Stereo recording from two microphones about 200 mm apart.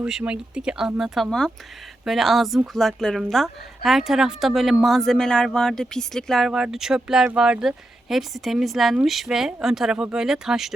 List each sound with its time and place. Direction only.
0.0 s speech: 5° right (ahead or behind)